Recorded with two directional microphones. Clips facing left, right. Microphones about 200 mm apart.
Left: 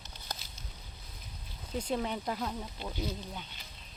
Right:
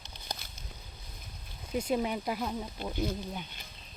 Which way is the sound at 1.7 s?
10° right (ahead or behind).